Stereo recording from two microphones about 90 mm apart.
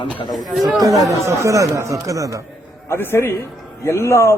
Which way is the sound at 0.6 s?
40° right (ahead or behind).